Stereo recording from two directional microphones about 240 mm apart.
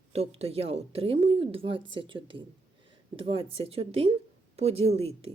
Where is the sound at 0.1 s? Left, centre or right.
Right.